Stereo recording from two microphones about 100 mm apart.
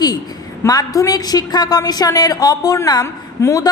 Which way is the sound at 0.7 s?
40° left (ahead or behind).